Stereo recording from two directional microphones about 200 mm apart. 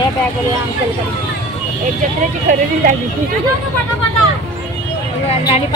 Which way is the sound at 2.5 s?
40° right (ahead or behind).